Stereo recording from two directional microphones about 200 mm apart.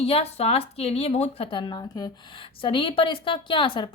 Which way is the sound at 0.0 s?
30° left (ahead or behind).